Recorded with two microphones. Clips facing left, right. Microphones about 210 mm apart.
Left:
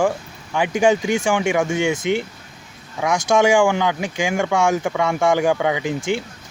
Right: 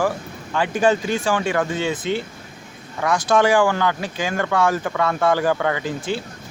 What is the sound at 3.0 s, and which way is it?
Speech, 15° left (ahead or behind).